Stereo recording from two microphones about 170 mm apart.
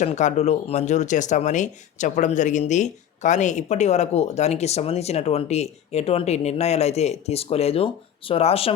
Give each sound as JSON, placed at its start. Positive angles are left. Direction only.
{"t": 0.0, "sound": "speech", "side_deg": 45}